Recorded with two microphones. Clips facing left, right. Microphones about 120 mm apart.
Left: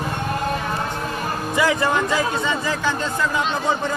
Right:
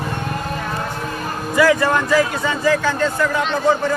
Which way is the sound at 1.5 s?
20° left (ahead or behind).